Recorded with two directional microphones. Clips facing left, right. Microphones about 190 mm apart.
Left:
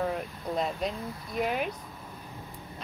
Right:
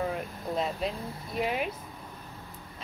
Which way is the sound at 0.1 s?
Centre (ahead or behind).